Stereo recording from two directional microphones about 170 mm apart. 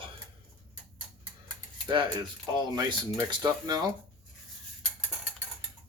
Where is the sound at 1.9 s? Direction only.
25° right (ahead or behind).